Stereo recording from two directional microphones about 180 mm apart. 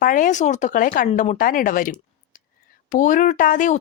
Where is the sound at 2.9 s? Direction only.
45° left (ahead or behind).